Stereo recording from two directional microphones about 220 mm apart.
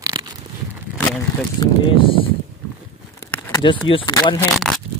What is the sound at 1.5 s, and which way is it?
Speech, 25° left (ahead or behind).